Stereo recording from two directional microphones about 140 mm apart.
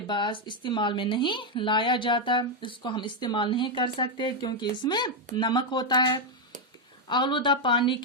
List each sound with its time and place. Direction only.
0.1 s a woman's voice: 35° left (ahead or behind)